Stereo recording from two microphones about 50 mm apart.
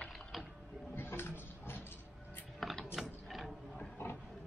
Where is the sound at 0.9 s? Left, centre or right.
Left.